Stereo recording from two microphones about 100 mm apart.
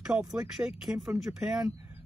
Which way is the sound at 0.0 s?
5° right (ahead or behind).